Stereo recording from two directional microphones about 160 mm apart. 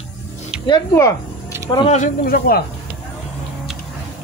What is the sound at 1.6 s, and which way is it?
Speech, 30° left (ahead or behind).